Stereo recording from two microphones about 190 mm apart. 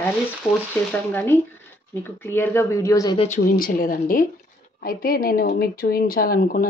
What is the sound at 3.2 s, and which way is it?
A woman's voice, 40° left (ahead or behind).